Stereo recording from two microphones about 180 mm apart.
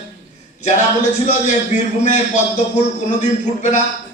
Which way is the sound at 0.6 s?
40° left (ahead or behind).